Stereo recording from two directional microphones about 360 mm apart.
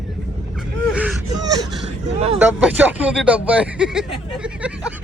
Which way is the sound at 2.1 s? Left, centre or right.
Centre.